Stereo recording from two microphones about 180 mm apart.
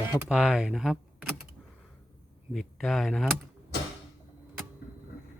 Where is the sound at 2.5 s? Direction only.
Centre (ahead or behind).